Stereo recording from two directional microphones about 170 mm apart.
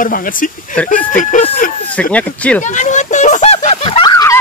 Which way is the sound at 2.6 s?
45° left (ahead or behind).